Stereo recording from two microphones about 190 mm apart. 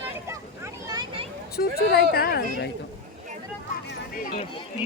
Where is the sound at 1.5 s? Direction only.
55° left (ahead or behind).